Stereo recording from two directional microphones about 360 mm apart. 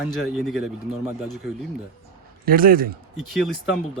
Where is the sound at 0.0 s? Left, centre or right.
Centre.